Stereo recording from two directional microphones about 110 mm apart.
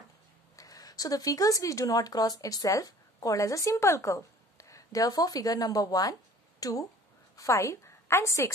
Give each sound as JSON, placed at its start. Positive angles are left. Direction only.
{"t": 0.6, "sound": "a woman's voice", "side_deg": 35}